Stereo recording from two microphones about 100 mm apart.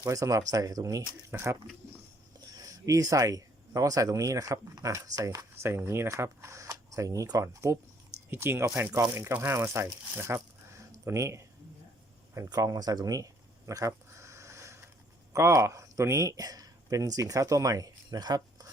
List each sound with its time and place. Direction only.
0.1 s speech: 35° right (ahead or behind)
2.6 s speech: 35° right (ahead or behind)
12.5 s a sound: 40° right (ahead or behind)
15.3 s speech: 30° right (ahead or behind)